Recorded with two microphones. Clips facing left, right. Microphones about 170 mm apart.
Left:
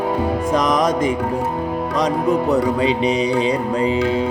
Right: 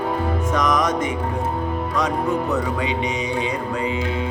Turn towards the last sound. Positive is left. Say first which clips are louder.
# left 6 dB
turn(degrees=35)  # may be behind; listen again after turning